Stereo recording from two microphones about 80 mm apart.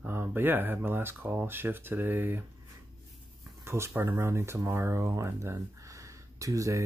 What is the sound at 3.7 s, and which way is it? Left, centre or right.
Speech, right.